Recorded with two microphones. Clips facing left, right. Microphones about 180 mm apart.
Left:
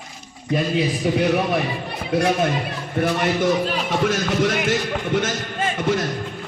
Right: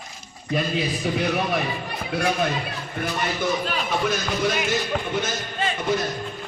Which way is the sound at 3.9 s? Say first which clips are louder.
Left 3 dB; 90° left.